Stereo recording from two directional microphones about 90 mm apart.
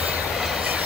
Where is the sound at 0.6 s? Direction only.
15° right (ahead or behind).